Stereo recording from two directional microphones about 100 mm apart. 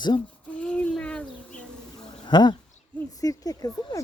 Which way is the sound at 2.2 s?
45° left (ahead or behind).